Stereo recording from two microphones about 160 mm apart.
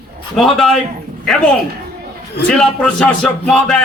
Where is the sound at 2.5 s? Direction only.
5° left (ahead or behind).